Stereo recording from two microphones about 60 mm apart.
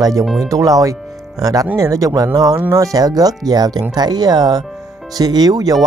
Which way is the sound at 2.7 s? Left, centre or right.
Right.